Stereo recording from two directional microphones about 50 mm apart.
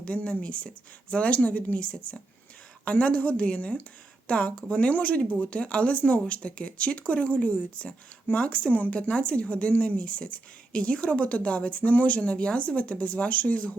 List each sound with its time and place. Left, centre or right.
0.0 s speech: left